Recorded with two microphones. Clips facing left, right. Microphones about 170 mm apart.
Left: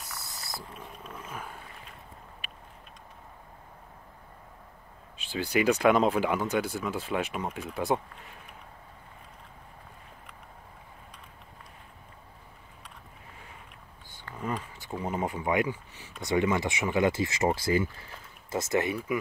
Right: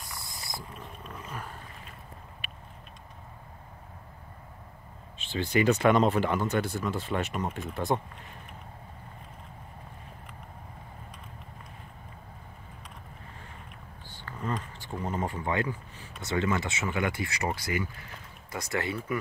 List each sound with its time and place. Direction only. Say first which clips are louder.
0.7 s a sound: even; centre (ahead or behind)
5.3 s speech: right 1 dB; centre (ahead or behind)
14.1 s speech: even; 10° left (ahead or behind)